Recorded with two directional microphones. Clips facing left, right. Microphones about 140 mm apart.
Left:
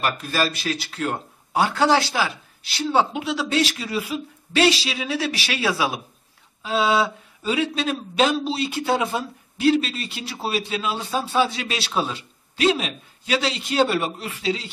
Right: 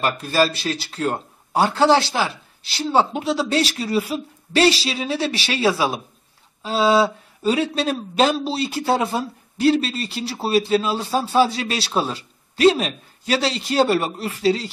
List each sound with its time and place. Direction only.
0.0 s speech: 30° right (ahead or behind)